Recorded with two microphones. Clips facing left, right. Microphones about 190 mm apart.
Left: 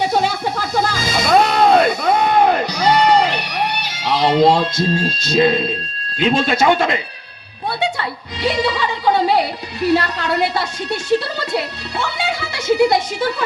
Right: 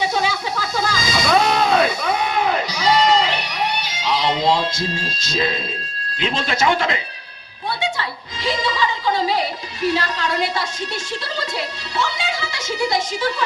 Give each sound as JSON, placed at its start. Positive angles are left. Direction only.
{"t": 0.0, "sound": "music", "side_deg": 60}
{"t": 6.2, "sound": "a woman's voice", "side_deg": 60}
{"t": 8.4, "sound": "music", "side_deg": 60}
{"t": 9.8, "sound": "a woman's voice", "side_deg": 60}